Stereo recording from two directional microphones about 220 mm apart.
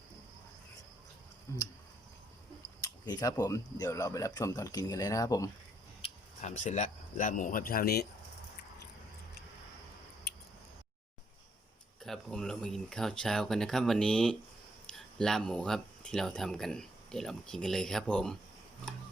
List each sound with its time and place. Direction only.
1.5 s speech: 10° left (ahead or behind)
2.8 s speech: 15° left (ahead or behind)
6.0 s speech: 30° left (ahead or behind)
12.0 s speech: centre (ahead or behind)